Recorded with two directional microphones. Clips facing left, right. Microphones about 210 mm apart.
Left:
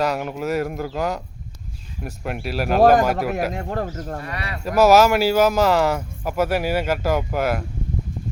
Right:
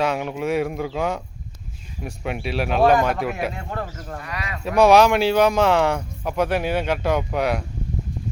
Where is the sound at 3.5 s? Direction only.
40° left (ahead or behind).